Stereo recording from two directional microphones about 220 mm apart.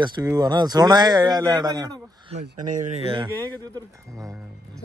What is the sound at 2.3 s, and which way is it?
Speech, 35° right (ahead or behind).